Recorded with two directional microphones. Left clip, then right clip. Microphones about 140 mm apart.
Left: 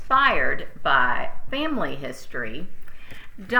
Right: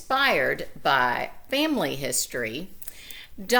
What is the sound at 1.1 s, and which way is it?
Speech, 35° right (ahead or behind).